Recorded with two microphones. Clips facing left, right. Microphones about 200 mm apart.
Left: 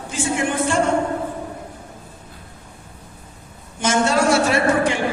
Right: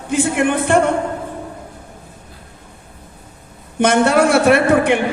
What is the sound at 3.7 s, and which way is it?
Speech, 60° right (ahead or behind).